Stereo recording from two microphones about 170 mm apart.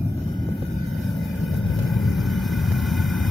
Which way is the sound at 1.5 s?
Centre (ahead or behind).